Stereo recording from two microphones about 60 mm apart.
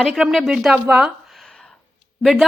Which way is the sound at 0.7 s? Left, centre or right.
Centre.